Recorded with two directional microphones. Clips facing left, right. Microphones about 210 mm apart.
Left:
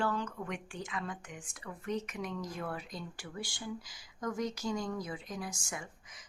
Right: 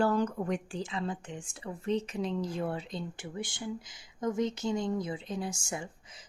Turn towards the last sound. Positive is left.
turn(degrees=-30)  # may be behind; listen again after turning